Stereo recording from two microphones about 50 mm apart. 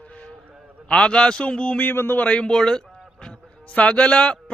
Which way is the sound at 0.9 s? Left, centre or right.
Centre.